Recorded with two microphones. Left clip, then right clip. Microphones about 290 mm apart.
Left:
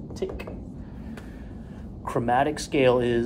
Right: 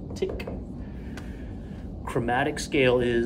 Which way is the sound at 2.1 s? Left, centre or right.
Centre.